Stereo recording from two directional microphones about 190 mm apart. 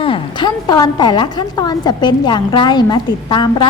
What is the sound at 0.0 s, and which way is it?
A woman's voice, 25° left (ahead or behind).